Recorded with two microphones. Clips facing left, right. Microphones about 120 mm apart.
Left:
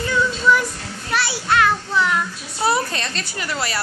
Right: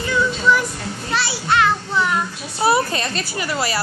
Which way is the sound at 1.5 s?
20° right (ahead or behind).